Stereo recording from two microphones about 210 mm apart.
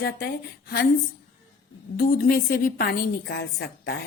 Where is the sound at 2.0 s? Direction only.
45° left (ahead or behind).